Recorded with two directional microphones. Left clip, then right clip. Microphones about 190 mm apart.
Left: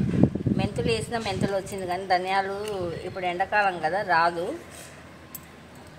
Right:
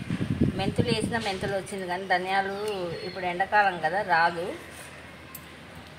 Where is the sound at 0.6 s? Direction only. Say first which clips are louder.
Left 2 dB; 35° left (ahead or behind).